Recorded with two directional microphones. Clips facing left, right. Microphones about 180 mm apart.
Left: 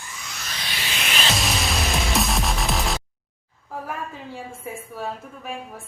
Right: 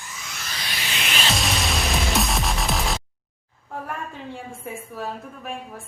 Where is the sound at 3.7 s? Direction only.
Centre (ahead or behind).